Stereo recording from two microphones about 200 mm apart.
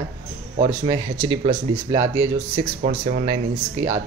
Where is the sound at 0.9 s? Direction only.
20° right (ahead or behind).